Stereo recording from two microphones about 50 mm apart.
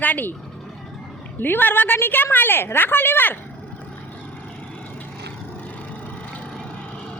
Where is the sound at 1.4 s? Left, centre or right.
Left.